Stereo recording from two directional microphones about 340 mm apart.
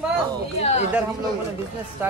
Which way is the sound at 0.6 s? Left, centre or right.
Centre.